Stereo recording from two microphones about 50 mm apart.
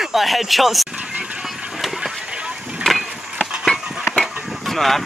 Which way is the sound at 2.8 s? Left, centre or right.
Centre.